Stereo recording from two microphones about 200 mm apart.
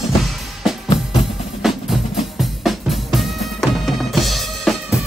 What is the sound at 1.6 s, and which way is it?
Music, centre (ahead or behind).